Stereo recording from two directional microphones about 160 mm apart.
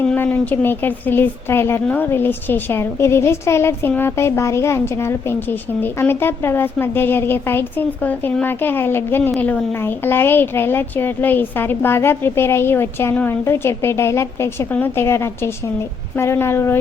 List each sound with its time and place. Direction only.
0.0 s speech: 10° left (ahead or behind)